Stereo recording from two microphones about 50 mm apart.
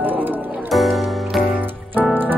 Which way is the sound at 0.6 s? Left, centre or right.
Centre.